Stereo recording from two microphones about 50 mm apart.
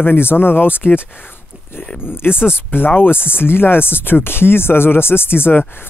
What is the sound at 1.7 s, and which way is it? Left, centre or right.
Speech, left.